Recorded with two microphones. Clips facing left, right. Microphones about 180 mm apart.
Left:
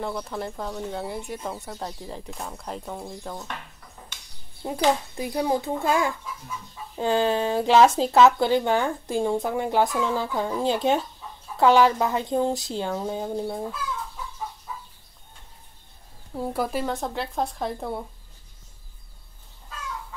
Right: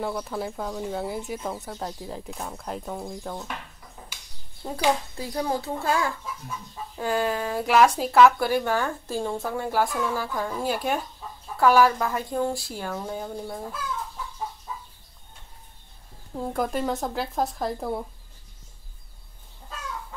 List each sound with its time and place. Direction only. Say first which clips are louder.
0.0 s speech: right 1 dB; centre (ahead or behind)
4.1 s a sound: even; 10° right (ahead or behind)
4.6 s a child's voice: left 2 dB; 15° left (ahead or behind)
16.3 s speech: even; 5° left (ahead or behind)